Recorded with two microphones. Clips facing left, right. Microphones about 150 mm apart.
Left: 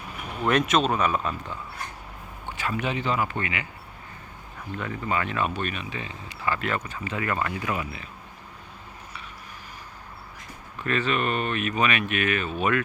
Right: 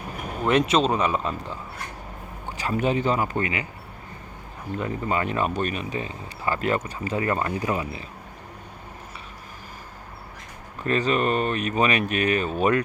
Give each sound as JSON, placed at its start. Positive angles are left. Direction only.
{"t": 0.5, "sound": "speech", "side_deg": -30}
{"t": 2.5, "sound": "speech", "side_deg": -40}
{"t": 4.8, "sound": "speech", "side_deg": -30}
{"t": 10.8, "sound": "speech", "side_deg": -35}